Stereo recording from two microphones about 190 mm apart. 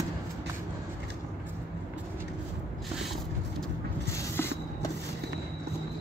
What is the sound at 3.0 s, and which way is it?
Vehicle, centre (ahead or behind).